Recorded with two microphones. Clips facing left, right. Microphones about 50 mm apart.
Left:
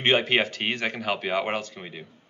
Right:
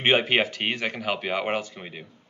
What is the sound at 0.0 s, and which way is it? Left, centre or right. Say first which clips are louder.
Speech: right 1 dB; centre.